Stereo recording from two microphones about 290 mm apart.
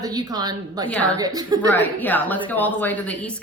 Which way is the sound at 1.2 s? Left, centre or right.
Centre.